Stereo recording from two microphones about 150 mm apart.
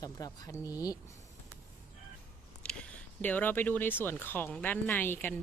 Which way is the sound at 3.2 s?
10° left (ahead or behind).